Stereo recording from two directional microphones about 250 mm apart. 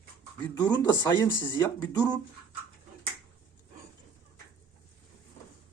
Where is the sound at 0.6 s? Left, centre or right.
Centre.